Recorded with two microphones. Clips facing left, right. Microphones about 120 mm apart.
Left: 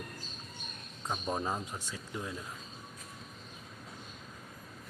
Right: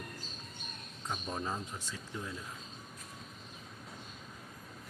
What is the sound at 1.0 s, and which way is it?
Speech, 35° left (ahead or behind).